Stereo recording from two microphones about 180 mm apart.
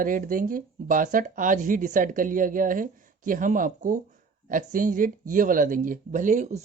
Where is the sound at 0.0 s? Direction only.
50° right (ahead or behind).